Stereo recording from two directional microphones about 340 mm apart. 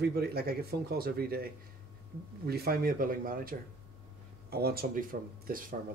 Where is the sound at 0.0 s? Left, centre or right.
Right.